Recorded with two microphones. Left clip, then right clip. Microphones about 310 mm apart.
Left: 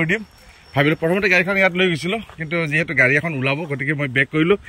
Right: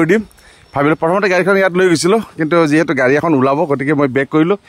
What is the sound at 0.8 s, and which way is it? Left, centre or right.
Speech, centre.